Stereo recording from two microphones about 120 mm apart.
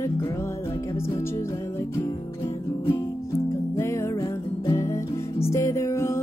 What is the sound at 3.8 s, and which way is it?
Music, 20° left (ahead or behind).